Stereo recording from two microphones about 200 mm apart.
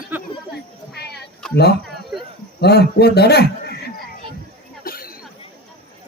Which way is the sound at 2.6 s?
55° left (ahead or behind).